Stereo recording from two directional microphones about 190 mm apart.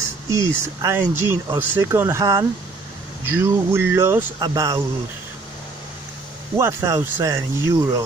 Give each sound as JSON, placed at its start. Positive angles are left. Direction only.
{"t": 0.6, "sound": "speech", "side_deg": -15}
{"t": 6.5, "sound": "speech", "side_deg": -15}